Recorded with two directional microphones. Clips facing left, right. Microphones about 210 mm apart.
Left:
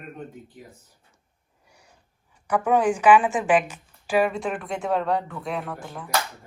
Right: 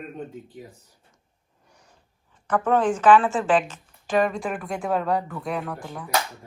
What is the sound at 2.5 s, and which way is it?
A woman's voice, 10° left (ahead or behind).